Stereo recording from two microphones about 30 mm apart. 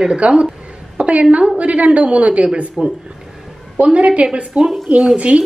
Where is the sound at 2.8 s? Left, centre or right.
Right.